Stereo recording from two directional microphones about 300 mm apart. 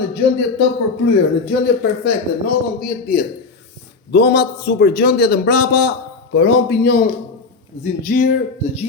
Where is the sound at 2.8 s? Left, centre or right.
Left.